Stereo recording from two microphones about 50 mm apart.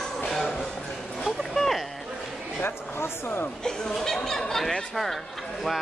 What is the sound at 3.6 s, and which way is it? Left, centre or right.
Speech, centre.